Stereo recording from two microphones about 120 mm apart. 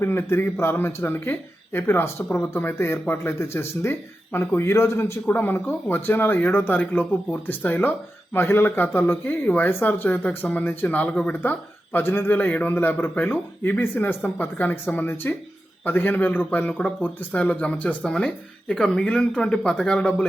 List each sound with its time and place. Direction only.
0.0 s speech: 20° left (ahead or behind)